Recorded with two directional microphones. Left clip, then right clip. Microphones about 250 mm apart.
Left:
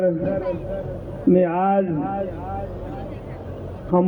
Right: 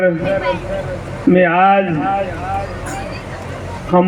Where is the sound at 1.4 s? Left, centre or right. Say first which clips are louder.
Right 9 dB; left.